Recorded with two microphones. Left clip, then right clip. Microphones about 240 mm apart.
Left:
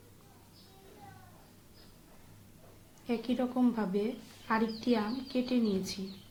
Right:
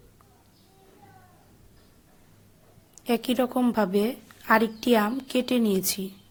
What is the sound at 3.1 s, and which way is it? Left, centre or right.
A woman's voice, right.